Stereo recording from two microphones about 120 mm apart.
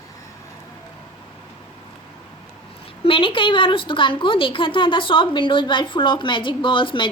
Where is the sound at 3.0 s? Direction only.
45° left (ahead or behind).